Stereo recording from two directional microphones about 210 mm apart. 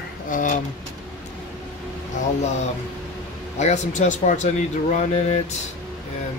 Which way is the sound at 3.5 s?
35° left (ahead or behind).